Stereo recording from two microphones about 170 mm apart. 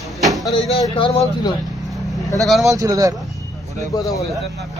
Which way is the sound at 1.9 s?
Centre (ahead or behind).